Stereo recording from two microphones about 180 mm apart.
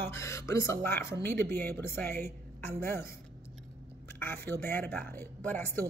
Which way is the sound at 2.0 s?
60° right (ahead or behind).